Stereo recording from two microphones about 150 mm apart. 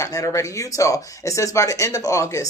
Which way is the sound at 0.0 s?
20° left (ahead or behind).